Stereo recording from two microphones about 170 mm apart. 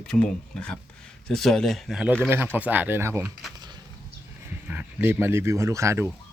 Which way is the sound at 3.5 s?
25° right (ahead or behind).